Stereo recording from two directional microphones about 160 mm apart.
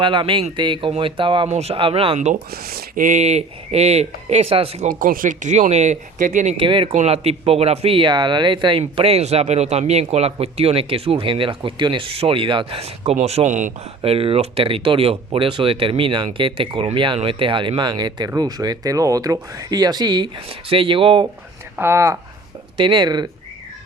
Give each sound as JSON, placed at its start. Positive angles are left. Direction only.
{"t": 0.0, "sound": "a man's voice", "side_deg": -30}
{"t": 1.5, "sound": "a man's voice", "side_deg": -40}
{"t": 2.5, "sound": "speech", "side_deg": -70}
{"t": 4.9, "sound": "speech", "side_deg": -60}
{"t": 6.6, "sound": "a man's voice", "side_deg": -30}
{"t": 21.8, "sound": "speech", "side_deg": -15}